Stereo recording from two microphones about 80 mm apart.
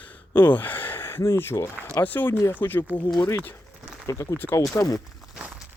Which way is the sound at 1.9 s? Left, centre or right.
Left.